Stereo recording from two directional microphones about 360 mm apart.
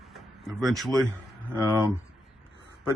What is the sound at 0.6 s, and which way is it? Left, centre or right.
Speech, centre.